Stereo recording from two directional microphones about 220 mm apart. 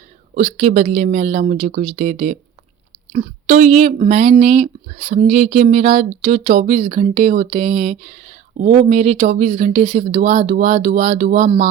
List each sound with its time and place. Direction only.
0.3 s speech: 30° right (ahead or behind)